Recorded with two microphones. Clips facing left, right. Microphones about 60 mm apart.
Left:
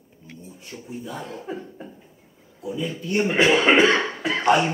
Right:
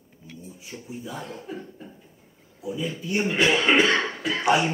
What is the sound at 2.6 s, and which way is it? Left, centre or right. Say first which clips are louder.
Speech: left 2 dB; centre.